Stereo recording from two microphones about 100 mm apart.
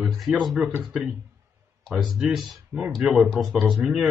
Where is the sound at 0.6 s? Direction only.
15° right (ahead or behind).